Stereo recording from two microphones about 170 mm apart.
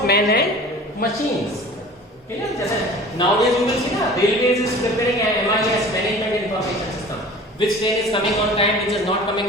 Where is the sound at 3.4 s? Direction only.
Centre (ahead or behind).